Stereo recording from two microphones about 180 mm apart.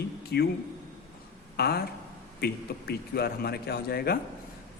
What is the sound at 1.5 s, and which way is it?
A man's voice, 60° left (ahead or behind).